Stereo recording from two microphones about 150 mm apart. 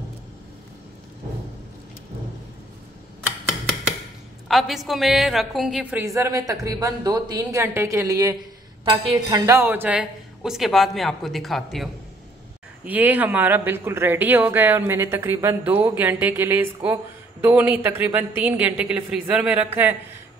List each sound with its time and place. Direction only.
4.5 s a woman's voice: centre (ahead or behind)
6.0 s a woman's voice: 20° right (ahead or behind); by 11.9 s centre (ahead or behind)
12.8 s speech: 10° right (ahead or behind)